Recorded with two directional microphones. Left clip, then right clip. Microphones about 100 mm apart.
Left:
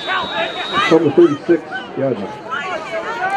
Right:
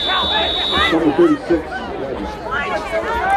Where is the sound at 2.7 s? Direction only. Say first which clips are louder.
Right 3 dB; 25° right (ahead or behind).